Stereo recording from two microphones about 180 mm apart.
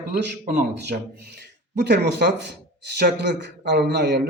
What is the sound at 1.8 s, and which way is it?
Speech, 70° right (ahead or behind).